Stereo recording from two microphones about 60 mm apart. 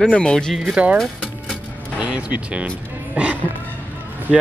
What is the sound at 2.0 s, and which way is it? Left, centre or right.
Speech, right.